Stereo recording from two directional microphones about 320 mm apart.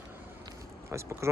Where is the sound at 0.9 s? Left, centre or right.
Centre.